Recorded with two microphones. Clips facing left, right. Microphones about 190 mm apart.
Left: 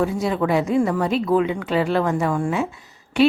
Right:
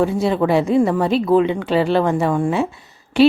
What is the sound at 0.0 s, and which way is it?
A woman's voice, 30° right (ahead or behind).